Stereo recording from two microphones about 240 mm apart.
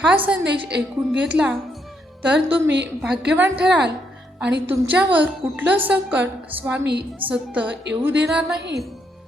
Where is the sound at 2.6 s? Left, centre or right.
Right.